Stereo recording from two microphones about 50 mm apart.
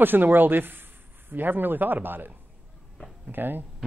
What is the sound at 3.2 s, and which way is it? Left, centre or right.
Speech, right.